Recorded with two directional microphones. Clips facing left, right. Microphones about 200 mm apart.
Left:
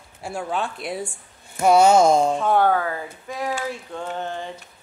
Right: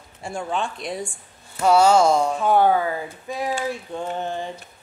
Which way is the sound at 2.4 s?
5° right (ahead or behind).